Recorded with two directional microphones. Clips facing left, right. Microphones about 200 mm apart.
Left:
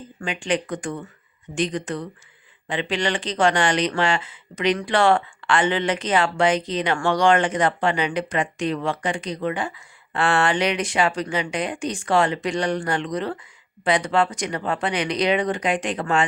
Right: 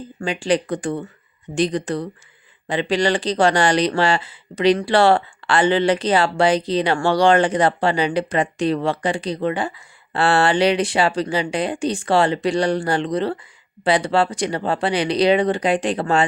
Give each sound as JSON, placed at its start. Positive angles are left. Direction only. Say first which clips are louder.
{"t": 0.2, "sound": "speech", "louder": "right 5 dB", "side_deg": -35}